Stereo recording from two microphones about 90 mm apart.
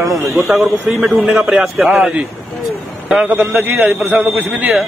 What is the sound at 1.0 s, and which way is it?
A man's voice, 5° right (ahead or behind).